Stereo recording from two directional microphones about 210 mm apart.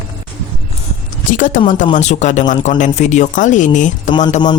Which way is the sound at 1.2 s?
40° left (ahead or behind).